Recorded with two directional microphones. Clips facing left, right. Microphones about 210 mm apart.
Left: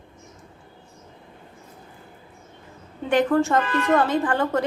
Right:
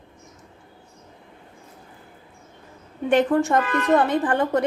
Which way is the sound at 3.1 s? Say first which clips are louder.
Right 1 dB; 20° right (ahead or behind).